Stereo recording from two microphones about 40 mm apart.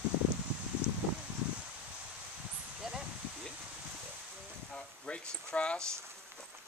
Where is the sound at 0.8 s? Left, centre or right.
Right.